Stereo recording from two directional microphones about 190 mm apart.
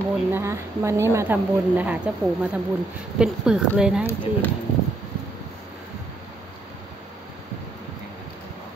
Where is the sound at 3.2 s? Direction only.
5° right (ahead or behind).